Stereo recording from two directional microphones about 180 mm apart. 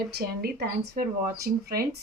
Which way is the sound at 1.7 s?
55° right (ahead or behind).